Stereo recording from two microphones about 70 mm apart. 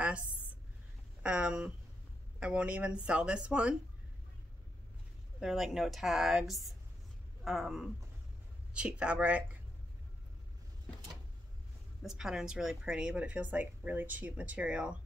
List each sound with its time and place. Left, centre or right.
1.2 s speech: centre
5.4 s speech: centre
8.7 s speech: centre
12.0 s speech: centre